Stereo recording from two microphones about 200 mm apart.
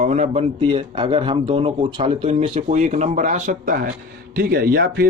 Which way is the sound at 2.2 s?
35° right (ahead or behind).